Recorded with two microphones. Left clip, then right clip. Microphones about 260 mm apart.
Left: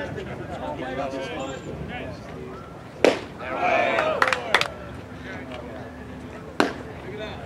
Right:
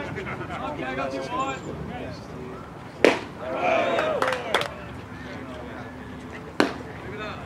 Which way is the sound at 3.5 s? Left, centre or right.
Centre.